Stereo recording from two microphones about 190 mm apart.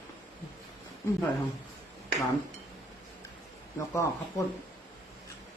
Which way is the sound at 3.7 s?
15° left (ahead or behind).